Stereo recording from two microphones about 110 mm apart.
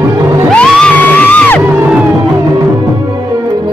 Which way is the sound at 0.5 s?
5° left (ahead or behind).